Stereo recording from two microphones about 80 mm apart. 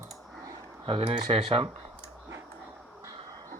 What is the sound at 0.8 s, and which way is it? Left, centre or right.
Speech, right.